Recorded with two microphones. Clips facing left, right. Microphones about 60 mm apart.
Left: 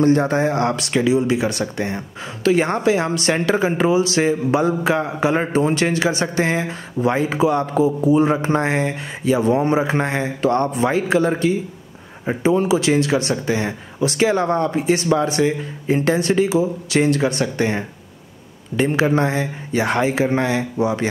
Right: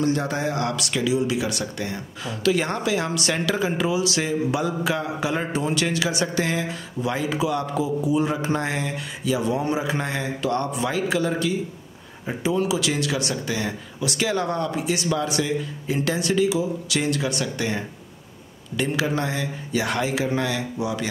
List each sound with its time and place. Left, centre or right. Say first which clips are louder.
0.0 s speech: left 7 dB; left